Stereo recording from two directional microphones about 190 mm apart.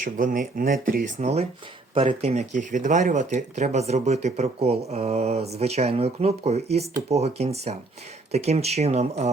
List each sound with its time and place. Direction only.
0.0 s speech: 45° right (ahead or behind)